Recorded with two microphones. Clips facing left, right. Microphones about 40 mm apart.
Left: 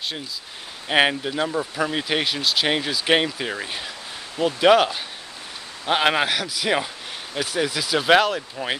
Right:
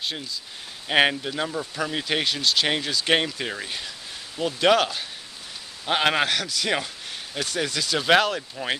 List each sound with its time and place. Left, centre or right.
0.8 s speech: centre